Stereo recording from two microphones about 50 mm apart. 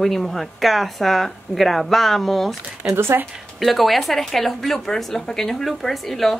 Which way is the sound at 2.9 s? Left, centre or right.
Right.